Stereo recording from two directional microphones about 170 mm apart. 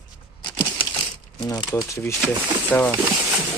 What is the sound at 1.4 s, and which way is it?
Speech, 20° left (ahead or behind).